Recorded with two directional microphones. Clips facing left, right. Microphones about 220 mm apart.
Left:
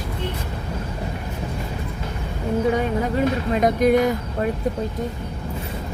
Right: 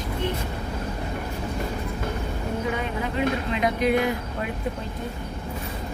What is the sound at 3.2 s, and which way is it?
Speech, 45° left (ahead or behind).